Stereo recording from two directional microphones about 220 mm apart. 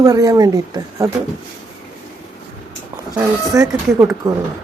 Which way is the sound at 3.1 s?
15° right (ahead or behind).